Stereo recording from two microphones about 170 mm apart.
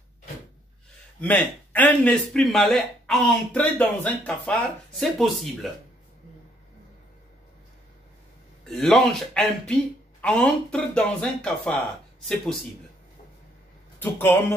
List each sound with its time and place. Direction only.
1.2 s speech: 10° left (ahead or behind)
8.6 s speech: centre (ahead or behind)
13.9 s a man's voice: 10° left (ahead or behind)